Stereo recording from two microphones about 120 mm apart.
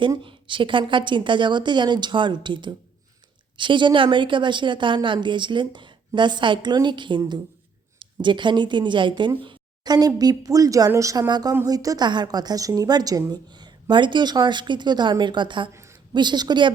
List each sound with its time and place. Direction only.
0.2 s a woman's voice: 45° right (ahead or behind)
15.7 s a sound: 25° right (ahead or behind)
16.1 s a woman's voice: 40° right (ahead or behind)